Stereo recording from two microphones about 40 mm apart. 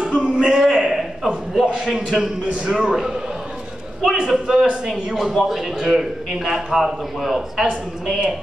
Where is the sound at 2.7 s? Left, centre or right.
Centre.